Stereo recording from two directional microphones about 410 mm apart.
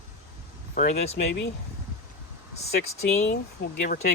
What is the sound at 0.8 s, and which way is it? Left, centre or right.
Speech, centre.